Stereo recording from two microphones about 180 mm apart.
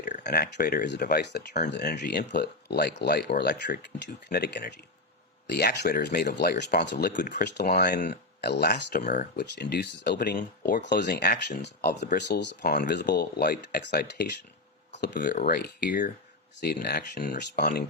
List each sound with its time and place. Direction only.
0.2 s speech: 65° left (ahead or behind)
3.8 s speech: 65° left (ahead or behind)
7.1 s speech: 45° left (ahead or behind)
7.5 s speech: 65° left (ahead or behind)
10.2 s speech: 50° left (ahead or behind); by 14.3 s 65° left (ahead or behind)
15.4 s speech: 60° left (ahead or behind); by 16.1 s 45° left (ahead or behind)
16.6 s speech: 65° left (ahead or behind)